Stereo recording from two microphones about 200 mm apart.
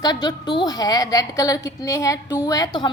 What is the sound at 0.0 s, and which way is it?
A woman's voice, 20° left (ahead or behind).